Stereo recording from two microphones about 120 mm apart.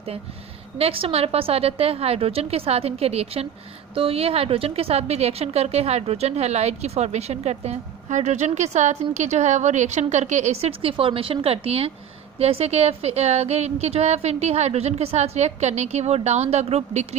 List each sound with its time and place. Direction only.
0.8 s a woman's voice: 55° right (ahead or behind)